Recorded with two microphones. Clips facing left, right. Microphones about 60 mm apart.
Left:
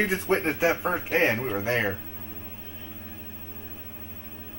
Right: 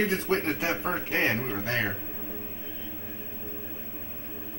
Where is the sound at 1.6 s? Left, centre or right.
Left.